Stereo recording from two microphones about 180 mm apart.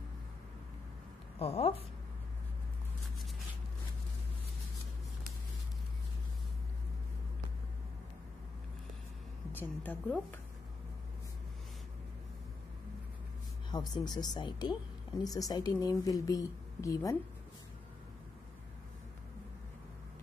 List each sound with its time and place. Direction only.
1.4 s a woman's voice: 35° left (ahead or behind)
9.5 s a woman's voice: 10° left (ahead or behind)
13.7 s a woman's voice: 20° left (ahead or behind)